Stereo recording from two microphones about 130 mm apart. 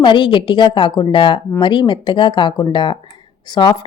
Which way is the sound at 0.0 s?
40° left (ahead or behind).